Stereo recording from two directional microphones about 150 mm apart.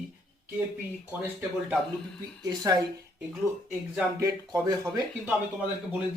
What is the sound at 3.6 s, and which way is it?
Speech, 15° right (ahead or behind).